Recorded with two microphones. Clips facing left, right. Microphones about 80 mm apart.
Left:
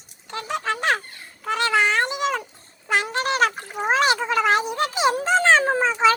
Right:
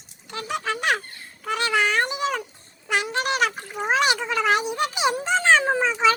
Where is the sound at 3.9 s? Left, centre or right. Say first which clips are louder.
Left 2 dB; left.